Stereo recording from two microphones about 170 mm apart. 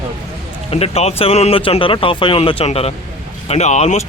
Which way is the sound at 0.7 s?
35° left (ahead or behind).